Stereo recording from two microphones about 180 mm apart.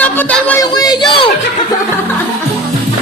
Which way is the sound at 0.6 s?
20° left (ahead or behind).